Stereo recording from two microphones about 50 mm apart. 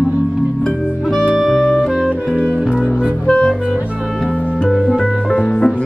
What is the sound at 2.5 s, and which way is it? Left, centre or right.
Music, right.